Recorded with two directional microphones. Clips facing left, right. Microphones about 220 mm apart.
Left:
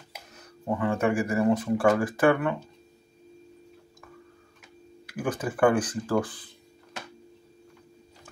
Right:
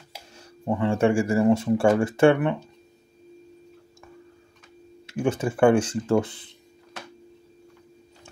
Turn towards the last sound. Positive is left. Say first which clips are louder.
# right 4 dB
turn(degrees=-25)  # may be behind; listen again after turning